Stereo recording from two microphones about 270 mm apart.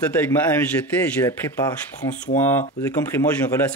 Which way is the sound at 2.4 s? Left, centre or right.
Centre.